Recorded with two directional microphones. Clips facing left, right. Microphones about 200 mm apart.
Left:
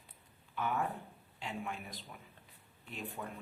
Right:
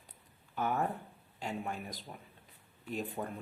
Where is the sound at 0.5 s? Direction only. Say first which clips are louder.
Right 3 dB; 40° right (ahead or behind).